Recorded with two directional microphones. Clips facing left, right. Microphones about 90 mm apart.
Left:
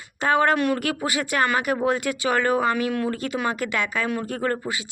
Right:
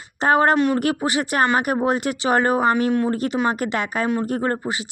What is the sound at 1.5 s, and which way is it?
Speech, 45° right (ahead or behind).